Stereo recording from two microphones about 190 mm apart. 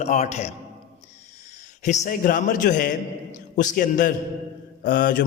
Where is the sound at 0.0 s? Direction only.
35° left (ahead or behind).